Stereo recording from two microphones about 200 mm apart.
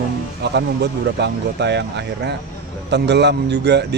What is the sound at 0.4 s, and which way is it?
Speech, 60° right (ahead or behind).